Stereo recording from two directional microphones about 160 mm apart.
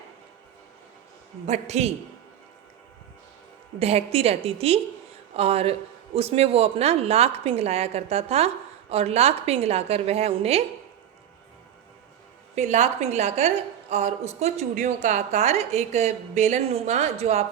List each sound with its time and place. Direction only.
1.5 s a woman's voice: 45° right (ahead or behind)
3.8 s a woman's voice: 40° right (ahead or behind)
12.5 s a woman's voice: 45° right (ahead or behind)